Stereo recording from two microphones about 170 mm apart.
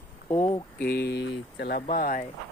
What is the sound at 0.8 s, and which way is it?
Speech, 70° left (ahead or behind).